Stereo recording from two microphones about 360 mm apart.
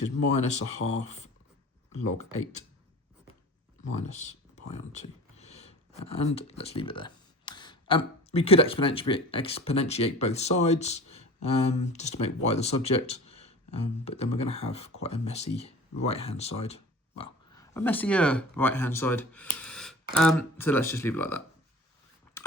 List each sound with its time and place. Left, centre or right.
0.3 s speech: centre
3.8 s speech: centre